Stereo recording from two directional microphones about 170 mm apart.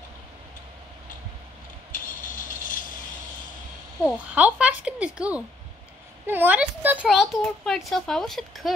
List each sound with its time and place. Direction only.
1.9 s vehicle: 50° left (ahead or behind)
4.4 s speech: 10° right (ahead or behind)